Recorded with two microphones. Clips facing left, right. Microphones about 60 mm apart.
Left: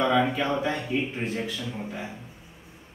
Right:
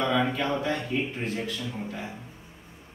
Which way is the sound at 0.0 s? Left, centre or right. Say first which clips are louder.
Left 2 dB; centre.